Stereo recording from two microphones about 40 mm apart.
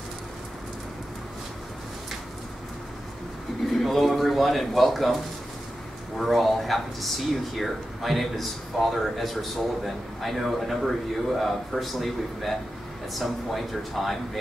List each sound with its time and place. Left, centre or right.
3.6 s a man's voice: centre